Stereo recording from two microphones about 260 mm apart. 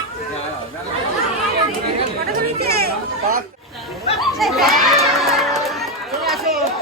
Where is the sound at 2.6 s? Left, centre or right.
Right.